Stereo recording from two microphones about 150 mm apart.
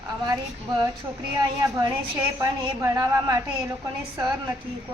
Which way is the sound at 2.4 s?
20° right (ahead or behind).